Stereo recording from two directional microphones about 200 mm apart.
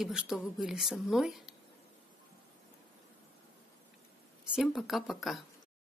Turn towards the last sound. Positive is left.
turn(degrees=0)  # may be behind; listen again after turning